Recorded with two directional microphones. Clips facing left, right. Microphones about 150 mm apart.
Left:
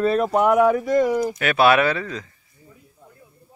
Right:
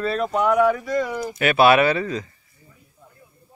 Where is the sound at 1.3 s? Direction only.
5° right (ahead or behind).